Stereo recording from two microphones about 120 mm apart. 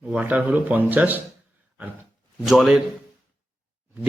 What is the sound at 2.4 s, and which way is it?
Speech, centre (ahead or behind).